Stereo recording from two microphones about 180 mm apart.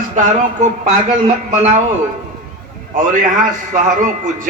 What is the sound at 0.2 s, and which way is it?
Speech, 40° right (ahead or behind).